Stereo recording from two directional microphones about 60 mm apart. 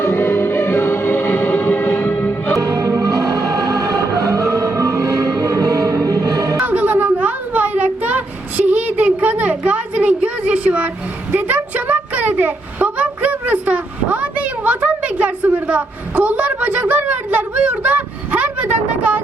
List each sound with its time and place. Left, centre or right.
0.0 s music: left
2.6 s music: right
6.6 s a sound: right